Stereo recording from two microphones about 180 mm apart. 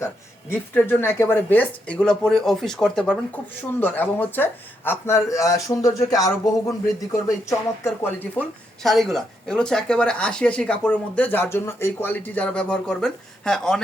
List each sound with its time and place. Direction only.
0.5 s speech: 10° left (ahead or behind)
8.0 s speech: 10° left (ahead or behind)